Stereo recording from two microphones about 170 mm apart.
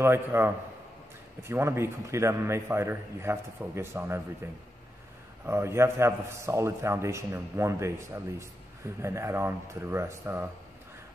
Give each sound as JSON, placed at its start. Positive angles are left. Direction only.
{"t": 0.0, "sound": "a man's voice", "side_deg": -15}
{"t": 1.5, "sound": "a man's voice", "side_deg": -15}
{"t": 5.4, "sound": "a man's voice", "side_deg": -15}